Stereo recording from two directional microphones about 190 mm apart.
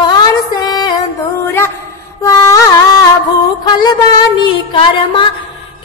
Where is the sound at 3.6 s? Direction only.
20° left (ahead or behind).